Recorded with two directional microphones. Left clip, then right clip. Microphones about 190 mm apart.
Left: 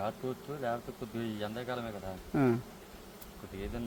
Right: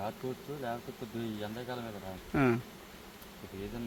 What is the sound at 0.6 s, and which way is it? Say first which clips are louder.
Speech: left 5 dB; 10° left (ahead or behind).